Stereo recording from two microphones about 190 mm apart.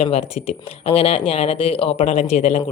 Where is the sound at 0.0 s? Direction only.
30° left (ahead or behind).